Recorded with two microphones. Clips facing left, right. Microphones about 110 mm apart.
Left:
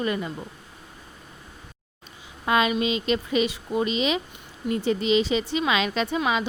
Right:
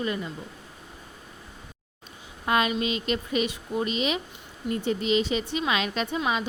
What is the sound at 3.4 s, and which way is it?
Speech, 90° left.